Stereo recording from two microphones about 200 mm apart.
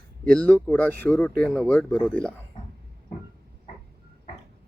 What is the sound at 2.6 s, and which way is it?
Music, 25° left (ahead or behind).